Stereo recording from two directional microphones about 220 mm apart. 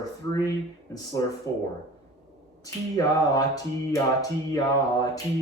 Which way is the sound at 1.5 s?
15° left (ahead or behind).